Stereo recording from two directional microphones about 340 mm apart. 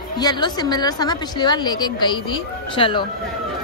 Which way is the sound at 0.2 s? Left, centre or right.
Centre.